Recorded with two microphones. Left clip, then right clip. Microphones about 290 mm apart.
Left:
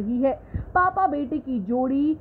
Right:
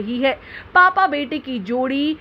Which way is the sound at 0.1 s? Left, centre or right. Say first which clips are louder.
Right 4 dB; right.